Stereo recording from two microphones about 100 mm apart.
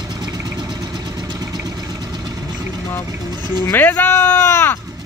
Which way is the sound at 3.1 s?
40° right (ahead or behind).